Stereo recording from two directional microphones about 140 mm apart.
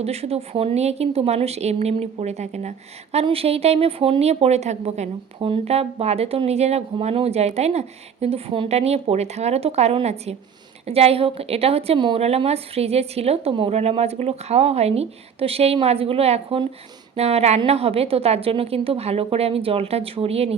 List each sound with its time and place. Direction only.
0.0 s a woman's voice: 45° right (ahead or behind)